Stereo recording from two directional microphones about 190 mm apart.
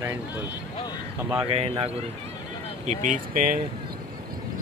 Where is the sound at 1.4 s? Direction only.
30° right (ahead or behind); by 3.6 s 50° right (ahead or behind).